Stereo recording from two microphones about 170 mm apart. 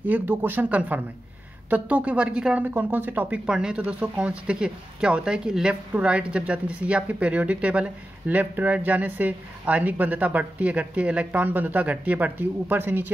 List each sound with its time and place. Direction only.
0.0 s speech: 10° right (ahead or behind)